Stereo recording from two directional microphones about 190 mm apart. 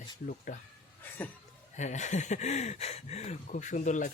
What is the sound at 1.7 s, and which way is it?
Speech, 40° left (ahead or behind).